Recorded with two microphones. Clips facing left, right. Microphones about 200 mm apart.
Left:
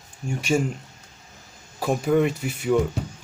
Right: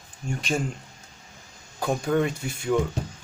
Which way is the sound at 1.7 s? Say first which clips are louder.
Left 3 dB; 5° left (ahead or behind).